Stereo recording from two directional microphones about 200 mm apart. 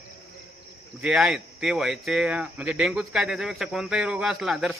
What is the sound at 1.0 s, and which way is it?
Speech, 5° right (ahead or behind).